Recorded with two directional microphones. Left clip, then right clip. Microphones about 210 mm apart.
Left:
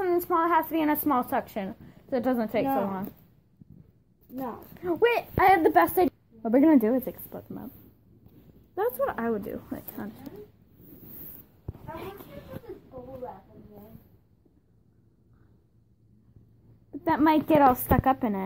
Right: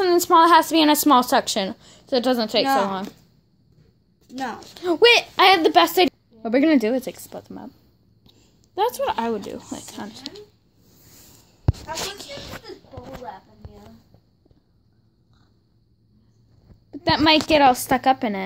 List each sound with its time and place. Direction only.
0.1 s a woman's voice: 35° right (ahead or behind)
2.0 s speech: 10° right (ahead or behind)
2.6 s speech: 20° right (ahead or behind)
4.7 s speech: 25° right (ahead or behind)
5.5 s speech: 15° right (ahead or behind)
5.9 s a sound: 5° right (ahead or behind)
6.8 s speech: 10° right (ahead or behind)
8.7 s speech: 15° right (ahead or behind)
16.9 s speech: 10° right (ahead or behind)